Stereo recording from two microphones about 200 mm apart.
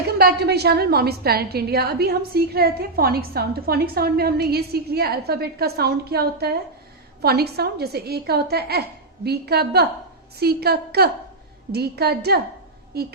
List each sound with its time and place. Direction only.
0.2 s a woman's voice: 50° right (ahead or behind)